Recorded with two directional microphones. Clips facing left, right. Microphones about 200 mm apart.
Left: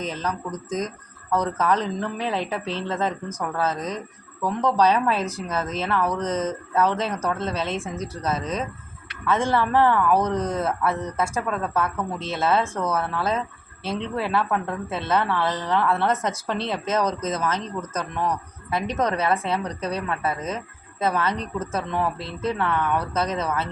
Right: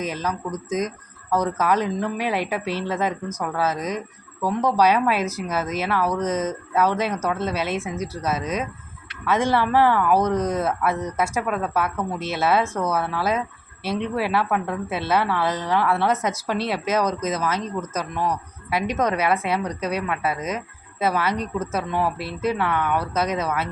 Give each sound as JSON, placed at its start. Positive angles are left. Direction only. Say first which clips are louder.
{"t": 0.0, "sound": "a woman's voice", "louder": "right 2 dB", "side_deg": -15}